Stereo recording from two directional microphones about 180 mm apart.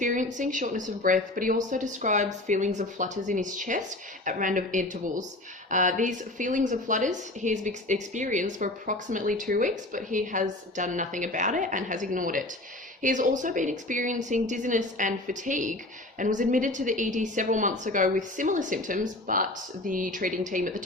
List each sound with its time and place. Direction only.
0.0 s a woman's voice: 45° right (ahead or behind)